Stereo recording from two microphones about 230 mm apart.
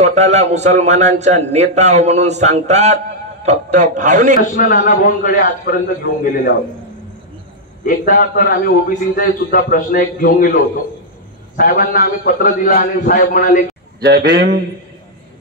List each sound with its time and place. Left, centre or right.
0.0 s a man's voice: right
4.4 s a man's voice: left
7.8 s a man's voice: left
14.0 s a man's voice: right